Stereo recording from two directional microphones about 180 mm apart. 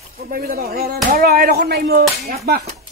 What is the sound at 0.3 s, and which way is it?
Speech, 55° right (ahead or behind).